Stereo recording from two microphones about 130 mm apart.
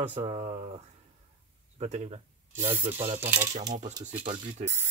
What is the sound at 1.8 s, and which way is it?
Speech, 60° right (ahead or behind).